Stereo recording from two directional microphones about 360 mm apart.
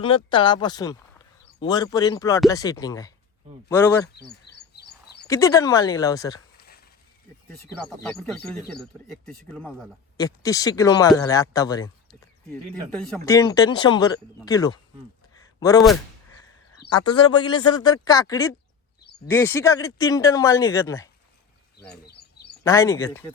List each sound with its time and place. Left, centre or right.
0.0 s speech: centre
4.7 s a sound: left
5.3 s speech: centre
7.8 s speech: centre
12.9 s speech: centre
17.2 s speech: centre
22.0 s a sound: left
22.6 s speech: centre